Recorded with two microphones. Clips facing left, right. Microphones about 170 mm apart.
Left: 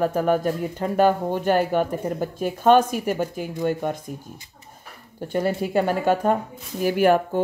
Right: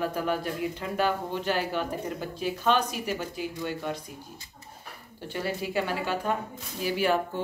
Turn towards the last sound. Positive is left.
turn(degrees=50)  # may be behind; listen again after turning